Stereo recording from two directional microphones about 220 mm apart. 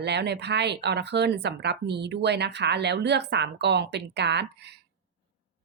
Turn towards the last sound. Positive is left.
turn(degrees=-50)  # may be behind; listen again after turning